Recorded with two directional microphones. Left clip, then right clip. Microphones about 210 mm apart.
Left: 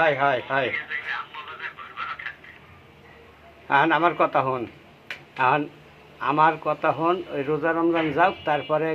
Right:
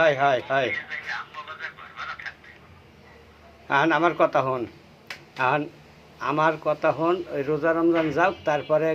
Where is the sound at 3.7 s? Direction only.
5° right (ahead or behind).